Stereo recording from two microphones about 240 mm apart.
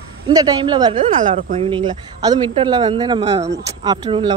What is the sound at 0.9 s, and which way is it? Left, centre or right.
Speech, right.